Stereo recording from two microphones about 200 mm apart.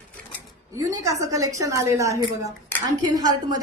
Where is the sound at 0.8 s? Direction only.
15° right (ahead or behind).